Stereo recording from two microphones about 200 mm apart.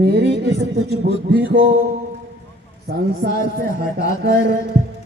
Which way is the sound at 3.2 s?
55° right (ahead or behind).